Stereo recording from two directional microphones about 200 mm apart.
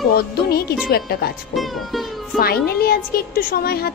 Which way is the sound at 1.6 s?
Centre (ahead or behind).